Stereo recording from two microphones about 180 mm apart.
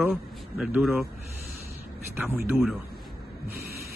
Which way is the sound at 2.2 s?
10° right (ahead or behind).